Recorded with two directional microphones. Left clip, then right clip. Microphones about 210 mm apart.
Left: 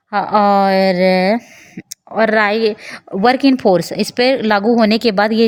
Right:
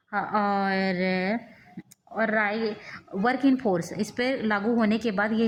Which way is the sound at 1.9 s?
45° left (ahead or behind).